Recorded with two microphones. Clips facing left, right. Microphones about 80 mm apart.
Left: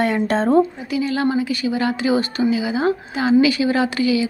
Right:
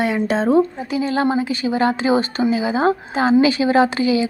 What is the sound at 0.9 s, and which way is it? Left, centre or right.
A woman's voice, right.